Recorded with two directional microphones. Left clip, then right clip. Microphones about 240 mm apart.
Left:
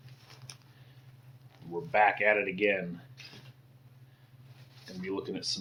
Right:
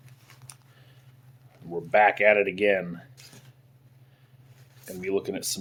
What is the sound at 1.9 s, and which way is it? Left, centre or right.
Speech, right.